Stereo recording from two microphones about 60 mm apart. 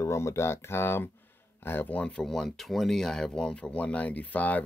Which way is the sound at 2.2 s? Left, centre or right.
Centre.